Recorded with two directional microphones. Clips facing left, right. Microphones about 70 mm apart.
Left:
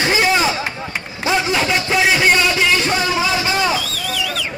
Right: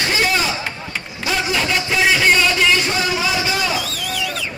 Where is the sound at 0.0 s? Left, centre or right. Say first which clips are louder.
Left 3 dB; left.